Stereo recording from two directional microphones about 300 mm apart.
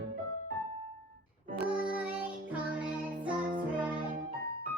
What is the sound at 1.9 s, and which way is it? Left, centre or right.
Music, centre.